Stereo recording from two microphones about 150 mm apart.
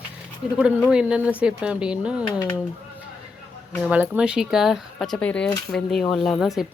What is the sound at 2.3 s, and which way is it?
Speech, 30° left (ahead or behind).